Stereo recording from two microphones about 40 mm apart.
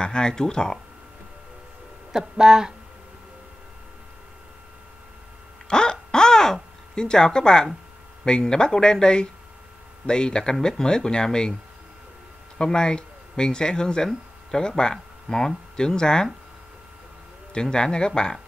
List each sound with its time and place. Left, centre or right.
0.0 s speech: centre
2.1 s speech: centre
5.7 s a sound: centre
8.3 s speech: left
12.5 s speech: centre
17.6 s speech: left